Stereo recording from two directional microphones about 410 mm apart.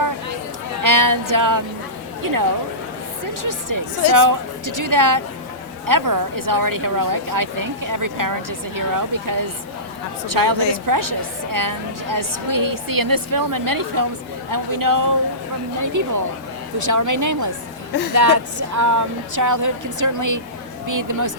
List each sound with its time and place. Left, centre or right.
0.8 s music: right
2.2 s a woman's voice: right
3.4 s a woman's voice: right